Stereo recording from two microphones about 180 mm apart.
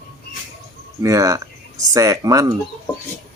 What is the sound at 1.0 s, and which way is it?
Speech, 20° right (ahead or behind).